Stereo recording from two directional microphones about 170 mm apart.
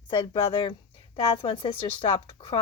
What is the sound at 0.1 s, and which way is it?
A woman's voice, 30° left (ahead or behind).